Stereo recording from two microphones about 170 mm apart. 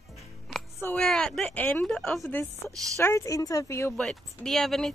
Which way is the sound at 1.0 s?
5° left (ahead or behind).